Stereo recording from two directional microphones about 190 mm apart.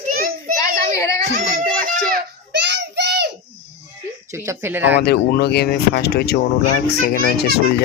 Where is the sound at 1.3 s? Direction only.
45° right (ahead or behind).